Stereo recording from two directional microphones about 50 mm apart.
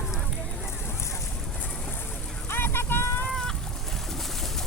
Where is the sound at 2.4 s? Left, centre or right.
Left.